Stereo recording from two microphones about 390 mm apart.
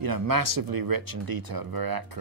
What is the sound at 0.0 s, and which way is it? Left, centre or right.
Speech, right.